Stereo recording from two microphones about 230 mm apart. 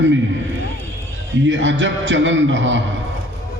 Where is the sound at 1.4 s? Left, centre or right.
Right.